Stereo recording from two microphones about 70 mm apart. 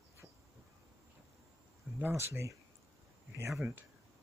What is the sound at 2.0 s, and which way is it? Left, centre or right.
Speech, right.